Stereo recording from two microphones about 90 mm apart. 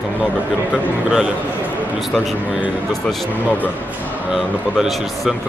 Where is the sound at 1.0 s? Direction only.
10° right (ahead or behind).